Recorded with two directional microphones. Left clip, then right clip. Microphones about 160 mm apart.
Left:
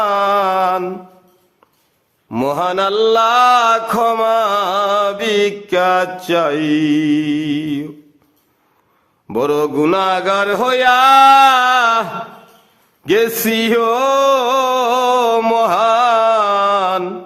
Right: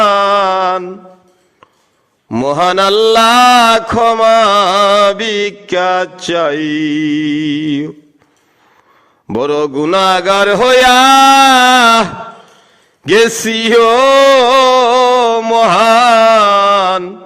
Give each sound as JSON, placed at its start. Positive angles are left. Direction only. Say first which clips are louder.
{"t": 0.0, "sound": "mantra", "louder": "right 5 dB", "side_deg": -30}
{"t": 2.4, "sound": "mantra", "louder": "right 5 dB", "side_deg": -30}
{"t": 9.3, "sound": "a sound", "louder": "right 2 dB", "side_deg": -30}
{"t": 13.1, "sound": "mantra", "louder": "right 5 dB", "side_deg": -30}